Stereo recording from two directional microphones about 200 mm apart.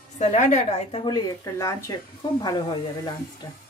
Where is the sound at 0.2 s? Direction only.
35° left (ahead or behind).